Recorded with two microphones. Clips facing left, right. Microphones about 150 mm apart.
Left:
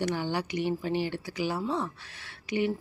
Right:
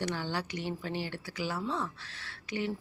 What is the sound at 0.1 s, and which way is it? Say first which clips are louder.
Speech: left 5 dB; 15° left (ahead or behind).